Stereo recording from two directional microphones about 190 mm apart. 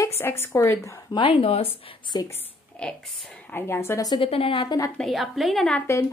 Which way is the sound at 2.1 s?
20° left (ahead or behind).